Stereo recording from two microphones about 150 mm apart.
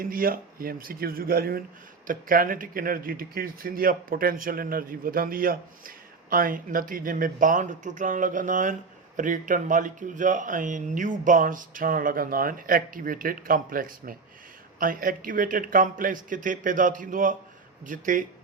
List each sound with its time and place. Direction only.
0.0 s speech: 75° right (ahead or behind)
2.0 s speech: 70° right (ahead or behind)